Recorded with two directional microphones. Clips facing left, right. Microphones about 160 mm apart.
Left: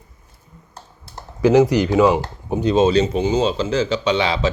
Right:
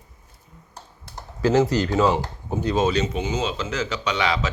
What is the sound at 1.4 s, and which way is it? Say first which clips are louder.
Speech: left 5 dB; 15° left (ahead or behind).